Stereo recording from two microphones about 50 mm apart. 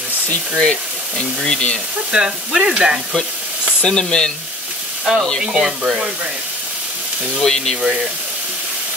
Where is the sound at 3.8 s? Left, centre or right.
Centre.